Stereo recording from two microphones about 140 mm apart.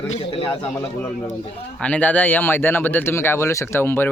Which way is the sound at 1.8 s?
10° left (ahead or behind).